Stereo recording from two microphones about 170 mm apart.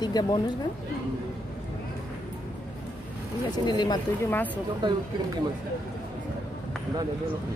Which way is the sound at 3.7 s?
25° left (ahead or behind).